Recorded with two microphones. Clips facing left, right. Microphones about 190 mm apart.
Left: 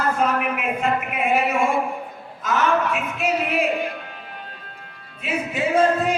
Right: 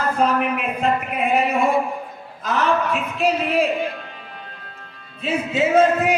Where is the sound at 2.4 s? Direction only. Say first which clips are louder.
Even; 35° right (ahead or behind).